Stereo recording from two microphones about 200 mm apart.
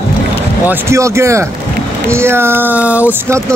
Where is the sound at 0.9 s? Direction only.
15° right (ahead or behind).